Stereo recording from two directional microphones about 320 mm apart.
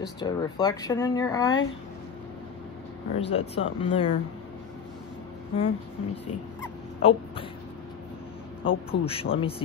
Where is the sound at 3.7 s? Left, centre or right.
Centre.